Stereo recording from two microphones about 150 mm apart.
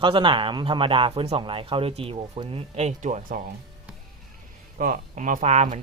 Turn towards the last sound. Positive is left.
turn(degrees=-50)  # may be behind; listen again after turning